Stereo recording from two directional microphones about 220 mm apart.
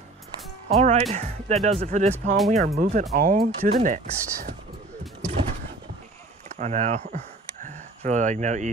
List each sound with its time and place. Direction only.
0.7 s speech: 30° right (ahead or behind)
6.6 s speech: 35° right (ahead or behind)